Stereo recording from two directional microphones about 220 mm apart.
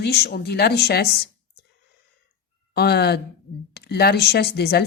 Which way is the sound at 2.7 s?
45° left (ahead or behind).